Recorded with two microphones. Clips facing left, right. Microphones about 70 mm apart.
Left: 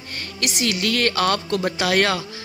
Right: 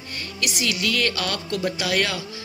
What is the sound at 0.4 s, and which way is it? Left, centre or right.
Speech, left.